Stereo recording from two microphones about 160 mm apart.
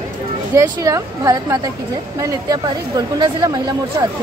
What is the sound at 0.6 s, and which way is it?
Speech, 20° right (ahead or behind).